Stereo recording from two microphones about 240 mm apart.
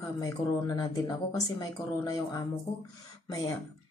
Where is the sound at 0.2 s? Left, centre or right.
Centre.